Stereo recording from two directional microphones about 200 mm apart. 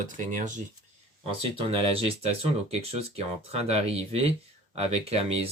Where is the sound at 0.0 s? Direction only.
40° right (ahead or behind).